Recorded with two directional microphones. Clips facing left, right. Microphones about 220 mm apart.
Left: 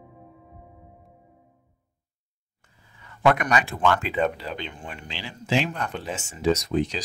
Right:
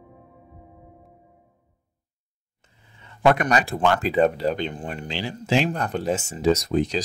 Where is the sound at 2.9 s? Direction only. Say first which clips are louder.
Right 2 dB; 25° right (ahead or behind).